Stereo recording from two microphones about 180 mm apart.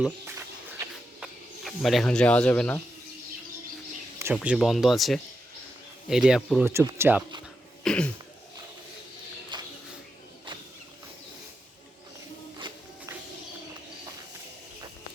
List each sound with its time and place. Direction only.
1.2 s speech: centre (ahead or behind)
4.4 s speech: centre (ahead or behind)
7.9 s throat clearing: 5° left (ahead or behind)
9.5 s a sound: 25° right (ahead or behind)